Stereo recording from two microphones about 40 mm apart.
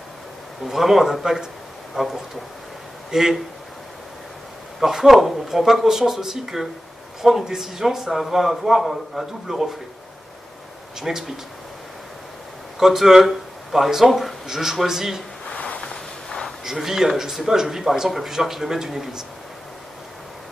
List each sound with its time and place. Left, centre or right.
0.7 s a man's voice: centre
4.7 s a man's voice: centre
11.0 s a man's voice: centre
12.7 s a man's voice: centre
15.5 s a sound: left
15.8 s vehicle: centre
16.6 s a man's voice: centre